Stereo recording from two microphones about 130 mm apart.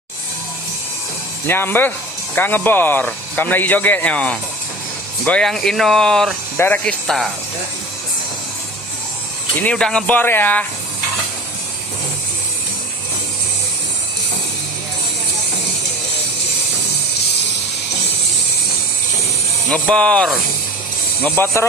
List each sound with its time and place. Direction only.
1.5 s speech: 15° left (ahead or behind)
9.6 s speech: 10° left (ahead or behind)
19.7 s speech: 10° left (ahead or behind)
21.2 s speech: 15° left (ahead or behind)